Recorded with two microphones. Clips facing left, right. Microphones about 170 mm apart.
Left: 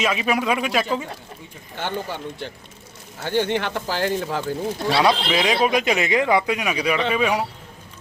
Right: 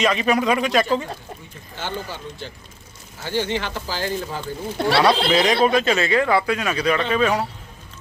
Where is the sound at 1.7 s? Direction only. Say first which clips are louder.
Left 2 dB; 60° left (ahead or behind).